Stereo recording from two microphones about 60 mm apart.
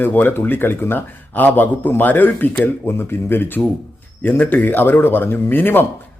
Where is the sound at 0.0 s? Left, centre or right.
Left.